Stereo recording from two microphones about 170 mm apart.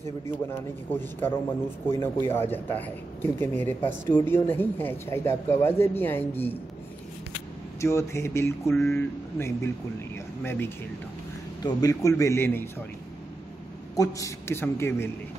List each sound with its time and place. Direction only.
0.0 s speech: 15° left (ahead or behind)
7.8 s speech: 15° left (ahead or behind)
13.9 s speech: 20° left (ahead or behind)